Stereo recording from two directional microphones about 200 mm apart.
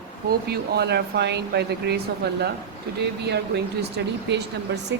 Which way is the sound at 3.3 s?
55° right (ahead or behind).